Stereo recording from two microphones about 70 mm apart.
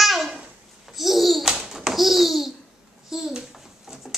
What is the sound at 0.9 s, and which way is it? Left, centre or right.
Babbling, centre.